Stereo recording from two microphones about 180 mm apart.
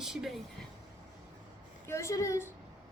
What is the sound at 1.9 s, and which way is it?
Speech, 15° left (ahead or behind).